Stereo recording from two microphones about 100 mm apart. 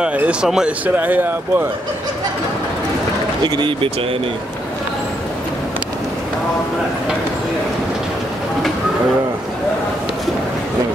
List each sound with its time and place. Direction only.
0.0 s speech: 10° right (ahead or behind)
3.4 s speech: 55° right (ahead or behind)